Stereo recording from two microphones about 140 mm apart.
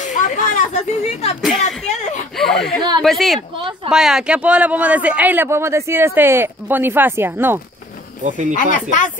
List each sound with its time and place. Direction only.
0.0 s a sound: 65° left (ahead or behind)
1.4 s speech: centre (ahead or behind)
1.9 s whimper: 55° left (ahead or behind)
2.3 s speech: 5° left (ahead or behind)
3.3 s speech: 35° right (ahead or behind)
3.9 s speech: 5° right (ahead or behind)
8.2 s speech: 60° right (ahead or behind)
8.5 s speech: 70° left (ahead or behind)